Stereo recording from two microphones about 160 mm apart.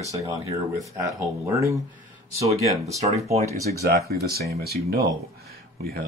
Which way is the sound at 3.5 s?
20° left (ahead or behind).